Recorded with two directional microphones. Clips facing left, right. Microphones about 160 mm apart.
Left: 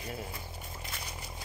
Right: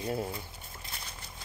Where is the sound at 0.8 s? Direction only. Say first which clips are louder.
Left 1 dB; 10° left (ahead or behind).